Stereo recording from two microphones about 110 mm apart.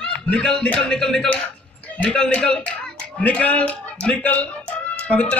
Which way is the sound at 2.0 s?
10° left (ahead or behind).